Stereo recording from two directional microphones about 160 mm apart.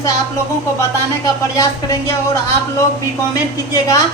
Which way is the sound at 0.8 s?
20° left (ahead or behind).